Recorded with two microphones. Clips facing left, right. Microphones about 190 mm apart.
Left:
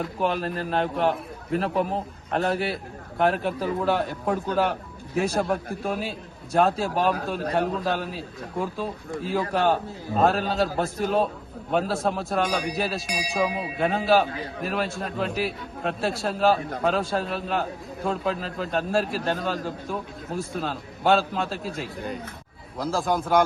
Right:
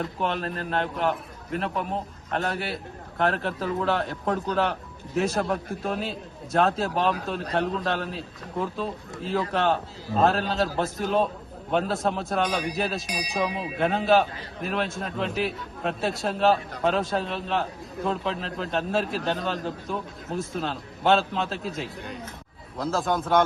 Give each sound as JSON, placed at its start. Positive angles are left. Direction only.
{"t": 0.0, "sound": "a man's voice", "side_deg": 5}
{"t": 1.5, "sound": "speech", "side_deg": 40}
{"t": 2.4, "sound": "a man's voice", "side_deg": 0}